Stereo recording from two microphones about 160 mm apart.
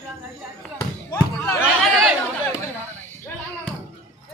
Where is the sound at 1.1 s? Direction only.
20° left (ahead or behind).